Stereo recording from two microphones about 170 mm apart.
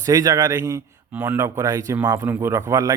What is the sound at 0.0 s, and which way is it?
Speech, 20° right (ahead or behind).